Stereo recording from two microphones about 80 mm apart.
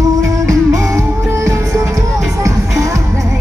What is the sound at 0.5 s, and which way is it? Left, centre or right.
Music, right.